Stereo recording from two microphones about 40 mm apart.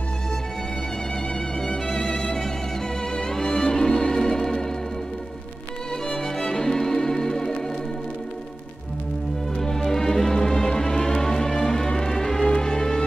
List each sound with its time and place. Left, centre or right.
1.7 s music: left
3.2 s music: centre
6.0 s music: centre
9.6 s music: centre